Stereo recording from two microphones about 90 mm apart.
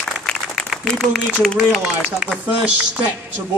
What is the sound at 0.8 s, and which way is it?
Speech, 5° left (ahead or behind).